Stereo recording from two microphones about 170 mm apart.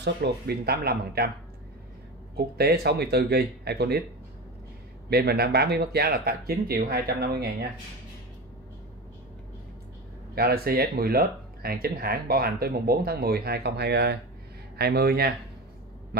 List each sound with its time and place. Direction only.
0.0 s speech: 75° right (ahead or behind)
2.3 s speech: 70° right (ahead or behind)
5.1 s speech: 65° right (ahead or behind)
10.3 s speech: 65° right (ahead or behind)